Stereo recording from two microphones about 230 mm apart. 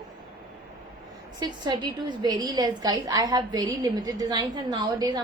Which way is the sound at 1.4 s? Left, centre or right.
Centre.